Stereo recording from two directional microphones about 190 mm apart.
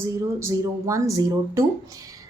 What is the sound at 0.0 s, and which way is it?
A woman's voice, 15° right (ahead or behind).